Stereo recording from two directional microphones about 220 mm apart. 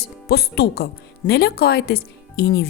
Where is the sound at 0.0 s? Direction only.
45° left (ahead or behind).